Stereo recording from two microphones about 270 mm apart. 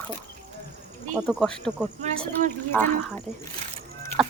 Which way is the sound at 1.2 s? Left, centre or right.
Centre.